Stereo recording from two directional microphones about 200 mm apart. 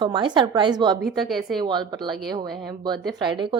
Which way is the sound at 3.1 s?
25° right (ahead or behind).